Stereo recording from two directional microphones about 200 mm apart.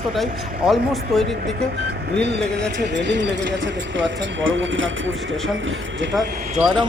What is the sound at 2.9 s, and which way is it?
Speech, 60° right (ahead or behind).